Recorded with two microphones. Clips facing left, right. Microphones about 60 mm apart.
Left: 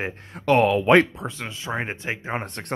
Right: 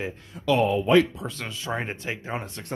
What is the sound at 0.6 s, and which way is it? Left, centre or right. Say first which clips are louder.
Speech: left 2 dB; left.